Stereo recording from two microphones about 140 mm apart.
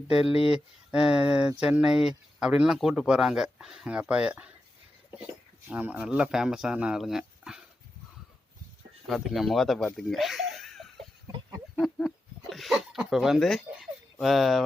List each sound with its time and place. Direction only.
0.3 s speech: 40° left (ahead or behind)
0.9 s speech: 5° right (ahead or behind)
9.0 s speech: centre (ahead or behind)